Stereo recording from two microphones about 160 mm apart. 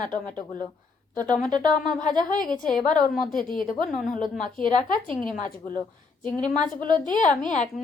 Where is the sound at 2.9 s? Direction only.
60° left (ahead or behind).